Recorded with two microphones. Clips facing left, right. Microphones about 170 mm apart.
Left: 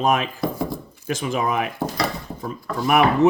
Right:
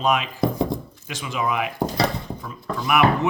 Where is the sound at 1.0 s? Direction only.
45° left (ahead or behind).